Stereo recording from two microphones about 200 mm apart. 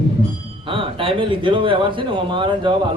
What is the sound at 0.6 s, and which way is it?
Speech, 25° right (ahead or behind).